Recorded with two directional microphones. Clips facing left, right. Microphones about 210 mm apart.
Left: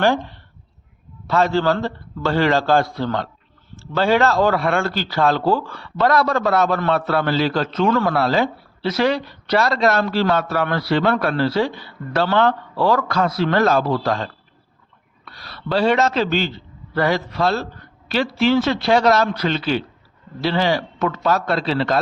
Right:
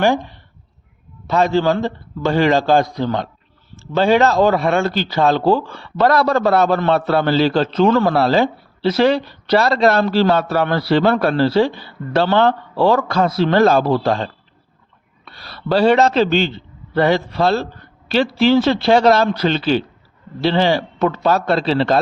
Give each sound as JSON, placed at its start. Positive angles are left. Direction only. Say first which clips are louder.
{"t": 0.0, "sound": "a man's voice", "louder": "right 2 dB", "side_deg": -15}
{"t": 6.0, "sound": "a man's voice", "louder": "right 3 dB", "side_deg": -35}